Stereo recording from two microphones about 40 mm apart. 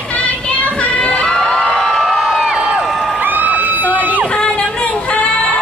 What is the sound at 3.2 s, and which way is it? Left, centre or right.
Crowd, right.